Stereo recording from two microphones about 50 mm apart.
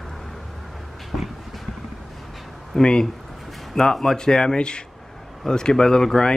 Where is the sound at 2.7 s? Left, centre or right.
Centre.